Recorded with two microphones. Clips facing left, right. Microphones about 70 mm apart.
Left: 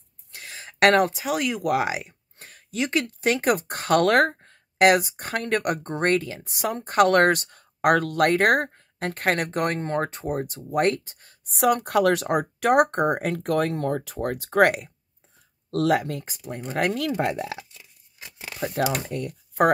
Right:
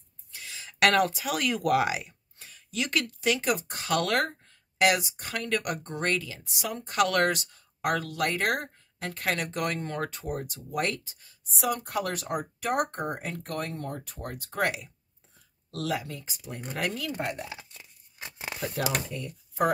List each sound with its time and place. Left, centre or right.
0.3 s speech: left
2.3 s a sound: left
2.7 s speech: left
3.2 s speech: left
17.1 s speech: left
17.7 s tearing: right
18.6 s speech: left